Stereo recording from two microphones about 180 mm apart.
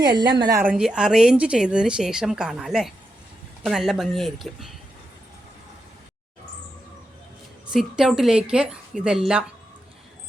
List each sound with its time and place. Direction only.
0.0 s a woman's voice: 25° right (ahead or behind)
0.6 s speech: 5° right (ahead or behind)
7.7 s speech: 5° right (ahead or behind)